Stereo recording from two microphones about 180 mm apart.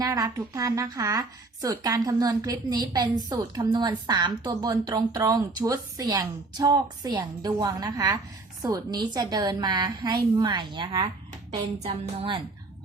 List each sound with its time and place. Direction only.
0.0 s a woman's voice: 20° right (ahead or behind)